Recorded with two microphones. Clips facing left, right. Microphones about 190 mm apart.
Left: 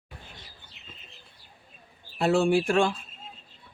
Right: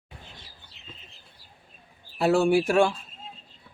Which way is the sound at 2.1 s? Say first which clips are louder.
Right 2 dB; 5° right (ahead or behind).